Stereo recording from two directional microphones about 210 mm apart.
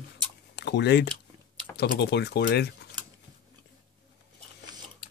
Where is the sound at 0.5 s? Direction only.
55° left (ahead or behind).